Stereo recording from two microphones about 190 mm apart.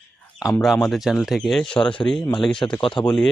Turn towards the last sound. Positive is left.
turn(degrees=5)  # may be behind; listen again after turning